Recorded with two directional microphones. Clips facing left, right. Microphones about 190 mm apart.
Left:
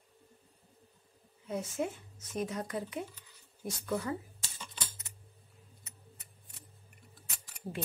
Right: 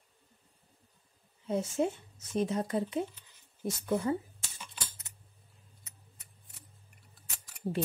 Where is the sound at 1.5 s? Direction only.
30° right (ahead or behind).